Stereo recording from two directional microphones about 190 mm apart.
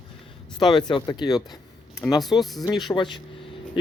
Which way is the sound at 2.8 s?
25° left (ahead or behind).